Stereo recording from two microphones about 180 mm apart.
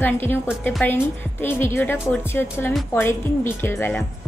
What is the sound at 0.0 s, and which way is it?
A woman's voice, 10° left (ahead or behind).